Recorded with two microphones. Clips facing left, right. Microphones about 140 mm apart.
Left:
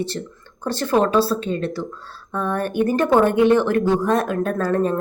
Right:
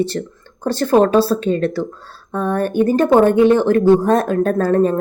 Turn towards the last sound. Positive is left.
turn(degrees=-35)  # may be behind; listen again after turning